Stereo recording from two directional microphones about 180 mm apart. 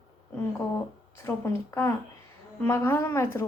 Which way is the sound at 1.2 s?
15° left (ahead or behind).